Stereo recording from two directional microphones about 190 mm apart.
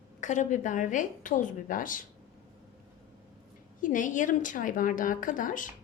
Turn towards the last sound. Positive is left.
turn(degrees=45)  # may be behind; listen again after turning